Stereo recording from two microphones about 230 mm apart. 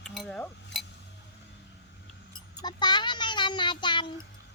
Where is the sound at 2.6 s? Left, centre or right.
Centre.